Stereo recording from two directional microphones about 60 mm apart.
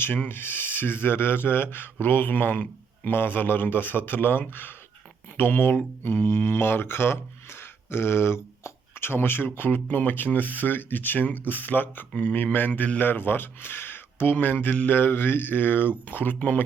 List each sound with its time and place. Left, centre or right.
0.0 s speech: left